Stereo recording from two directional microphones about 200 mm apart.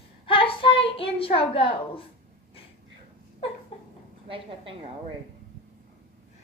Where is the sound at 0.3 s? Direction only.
25° left (ahead or behind).